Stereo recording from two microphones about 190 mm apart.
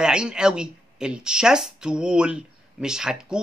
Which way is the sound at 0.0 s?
5° right (ahead or behind).